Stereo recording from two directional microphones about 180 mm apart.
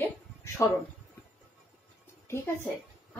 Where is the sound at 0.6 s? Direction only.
15° left (ahead or behind).